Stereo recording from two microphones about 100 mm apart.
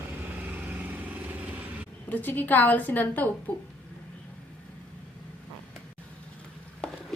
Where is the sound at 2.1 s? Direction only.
20° left (ahead or behind).